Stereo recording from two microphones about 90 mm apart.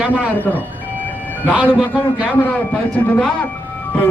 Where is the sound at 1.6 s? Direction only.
15° left (ahead or behind).